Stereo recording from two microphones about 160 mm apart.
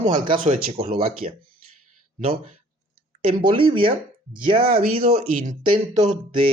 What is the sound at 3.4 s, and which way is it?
Speech, 30° right (ahead or behind).